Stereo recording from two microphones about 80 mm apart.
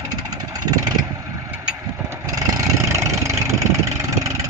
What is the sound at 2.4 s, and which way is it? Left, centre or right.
Vehicle, right.